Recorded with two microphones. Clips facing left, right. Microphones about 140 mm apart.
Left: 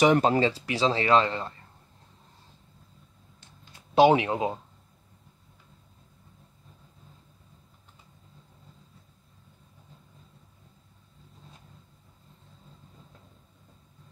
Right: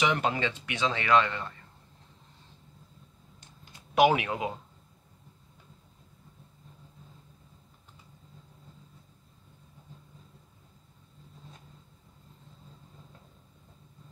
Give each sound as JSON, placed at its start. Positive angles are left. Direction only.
{"t": 0.0, "sound": "speech", "side_deg": 40}
{"t": 3.9, "sound": "speech", "side_deg": 30}